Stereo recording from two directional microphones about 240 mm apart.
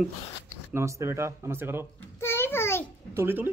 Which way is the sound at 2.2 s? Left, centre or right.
Centre.